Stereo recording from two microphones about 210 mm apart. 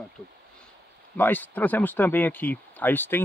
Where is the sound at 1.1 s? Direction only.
10° left (ahead or behind).